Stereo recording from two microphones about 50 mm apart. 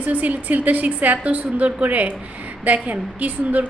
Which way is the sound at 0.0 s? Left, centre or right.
Right.